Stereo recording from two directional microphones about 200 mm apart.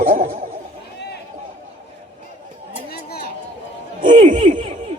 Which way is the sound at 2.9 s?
50° left (ahead or behind).